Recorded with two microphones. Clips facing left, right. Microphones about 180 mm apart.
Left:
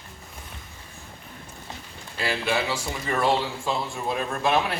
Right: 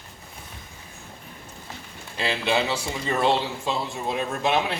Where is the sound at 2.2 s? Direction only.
25° right (ahead or behind).